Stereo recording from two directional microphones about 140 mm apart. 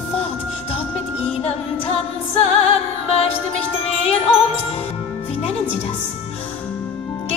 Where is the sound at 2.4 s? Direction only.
45° left (ahead or behind).